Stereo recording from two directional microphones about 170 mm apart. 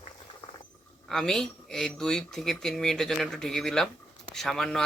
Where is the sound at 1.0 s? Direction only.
Centre (ahead or behind).